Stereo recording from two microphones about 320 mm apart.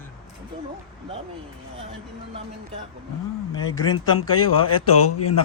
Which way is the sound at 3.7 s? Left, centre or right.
Centre.